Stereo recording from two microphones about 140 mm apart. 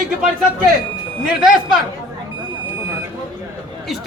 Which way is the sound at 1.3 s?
5° right (ahead or behind).